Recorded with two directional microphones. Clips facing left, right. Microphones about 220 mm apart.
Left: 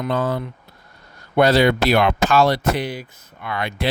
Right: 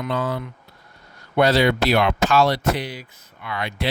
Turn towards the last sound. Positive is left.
turn(degrees=50)  # may be behind; listen again after turning